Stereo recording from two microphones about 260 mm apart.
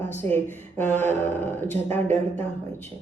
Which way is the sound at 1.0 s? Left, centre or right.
Centre.